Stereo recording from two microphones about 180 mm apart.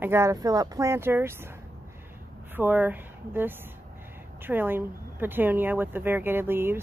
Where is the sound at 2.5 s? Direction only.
10° right (ahead or behind).